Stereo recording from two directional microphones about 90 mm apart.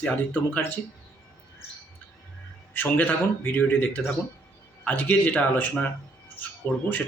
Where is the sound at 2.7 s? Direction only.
20° left (ahead or behind).